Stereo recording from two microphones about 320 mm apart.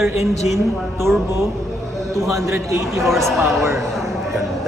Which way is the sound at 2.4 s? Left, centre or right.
Centre.